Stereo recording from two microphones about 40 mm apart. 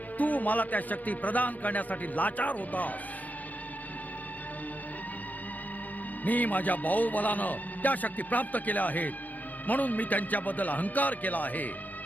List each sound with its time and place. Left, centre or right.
0.2 s a man's voice: left
6.2 s a man's voice: left